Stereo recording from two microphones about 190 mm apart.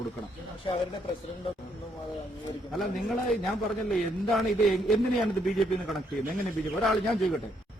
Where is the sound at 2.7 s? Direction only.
Centre (ahead or behind).